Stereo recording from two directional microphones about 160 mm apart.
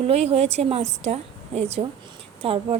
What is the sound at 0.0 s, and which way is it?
Speech, 40° right (ahead or behind).